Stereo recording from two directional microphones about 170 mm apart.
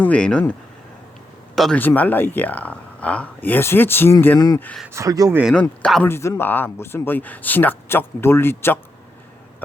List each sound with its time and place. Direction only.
0.0 s speech: 5° left (ahead or behind)
1.5 s speech: centre (ahead or behind)
4.4 s speech: 25° left (ahead or behind)
4.6 s speech: 5° left (ahead or behind)
4.9 s speech: 20° right (ahead or behind)
5.8 s speech: 5° left (ahead or behind)